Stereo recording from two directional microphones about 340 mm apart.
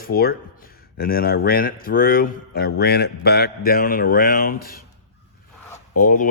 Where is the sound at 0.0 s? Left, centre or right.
Left.